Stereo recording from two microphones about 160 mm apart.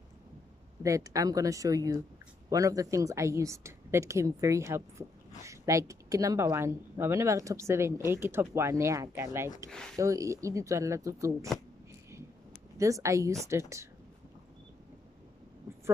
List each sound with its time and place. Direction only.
0.8 s a woman's voice: 20° right (ahead or behind)
9.7 s speech: 5° left (ahead or behind)
9.9 s a woman's voice: 20° right (ahead or behind)
12.7 s a woman's voice: 20° right (ahead or behind)